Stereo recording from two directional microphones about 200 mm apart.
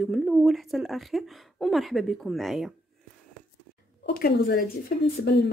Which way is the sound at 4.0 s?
50° left (ahead or behind).